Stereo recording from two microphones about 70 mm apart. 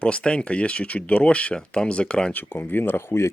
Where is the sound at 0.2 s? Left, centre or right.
Centre.